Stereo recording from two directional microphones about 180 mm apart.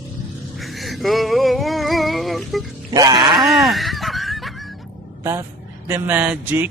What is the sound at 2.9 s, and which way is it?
Groan, 20° right (ahead or behind).